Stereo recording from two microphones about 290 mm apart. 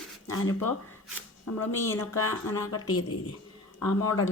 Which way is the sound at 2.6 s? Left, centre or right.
Left.